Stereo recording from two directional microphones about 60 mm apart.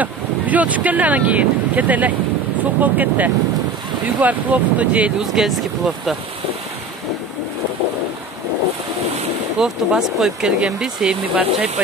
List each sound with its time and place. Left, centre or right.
0.0 s speech: right
5.2 s speech: centre
9.6 s speech: centre